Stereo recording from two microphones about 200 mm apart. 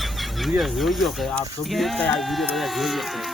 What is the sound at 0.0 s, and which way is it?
Speech, centre (ahead or behind).